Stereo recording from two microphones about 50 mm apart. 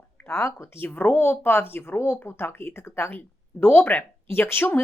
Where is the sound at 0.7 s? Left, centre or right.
Left.